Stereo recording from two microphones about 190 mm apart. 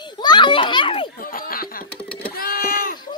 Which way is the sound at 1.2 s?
50° left (ahead or behind).